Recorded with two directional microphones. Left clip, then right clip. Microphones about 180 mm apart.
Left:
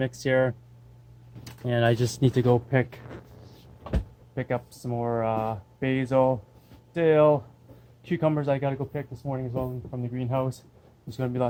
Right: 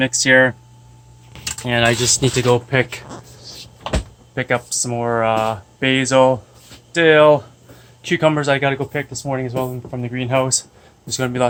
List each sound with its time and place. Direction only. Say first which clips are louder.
0.0 s speech: right 11 dB; 20° left (ahead or behind)
1.6 s speech: right 8 dB; 30° left (ahead or behind)
2.4 s speech: right 6 dB; 10° left (ahead or behind)
4.4 s speech: right 11 dB; centre (ahead or behind)